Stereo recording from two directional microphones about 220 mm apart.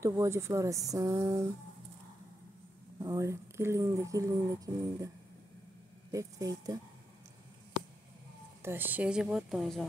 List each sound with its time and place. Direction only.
0.0 s speech: 10° right (ahead or behind)
3.0 s speech: 15° right (ahead or behind)
6.1 s speech: 15° right (ahead or behind)
8.6 s a woman's voice: 10° right (ahead or behind)